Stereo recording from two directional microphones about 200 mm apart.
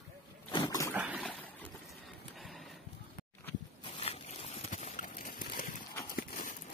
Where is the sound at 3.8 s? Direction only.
30° left (ahead or behind).